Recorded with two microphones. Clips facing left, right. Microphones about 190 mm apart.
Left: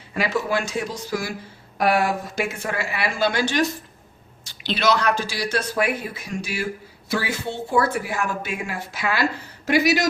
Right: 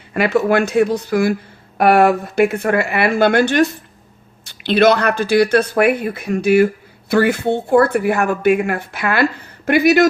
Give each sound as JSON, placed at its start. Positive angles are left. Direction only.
{"t": 0.1, "sound": "speech", "side_deg": -60}